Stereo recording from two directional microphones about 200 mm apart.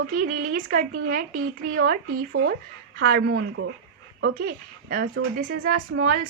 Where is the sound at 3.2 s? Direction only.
90° right.